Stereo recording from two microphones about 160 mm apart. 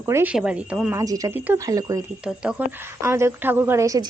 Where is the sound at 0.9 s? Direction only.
20° right (ahead or behind).